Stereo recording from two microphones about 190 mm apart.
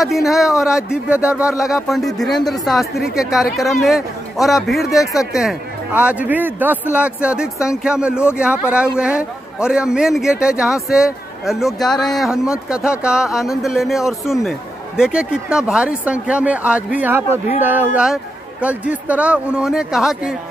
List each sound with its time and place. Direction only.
0.0 s a man's voice: centre (ahead or behind)
5.0 s speech: 15° left (ahead or behind)
5.3 s a man's voice: centre (ahead or behind)